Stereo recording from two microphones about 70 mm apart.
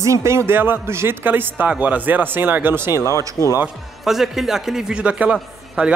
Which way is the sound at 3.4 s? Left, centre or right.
Left.